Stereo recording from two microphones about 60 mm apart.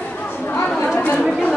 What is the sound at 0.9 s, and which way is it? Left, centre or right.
Chatter, left.